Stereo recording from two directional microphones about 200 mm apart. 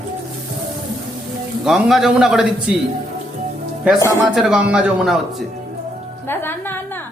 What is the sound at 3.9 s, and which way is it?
Speech, 15° left (ahead or behind).